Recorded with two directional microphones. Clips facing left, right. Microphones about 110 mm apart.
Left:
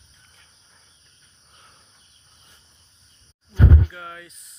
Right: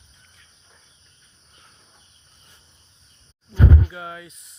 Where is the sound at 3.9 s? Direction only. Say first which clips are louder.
Right 3 dB; 10° right (ahead or behind).